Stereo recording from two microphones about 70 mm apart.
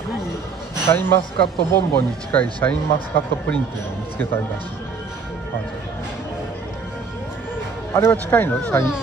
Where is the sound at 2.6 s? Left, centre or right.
Left.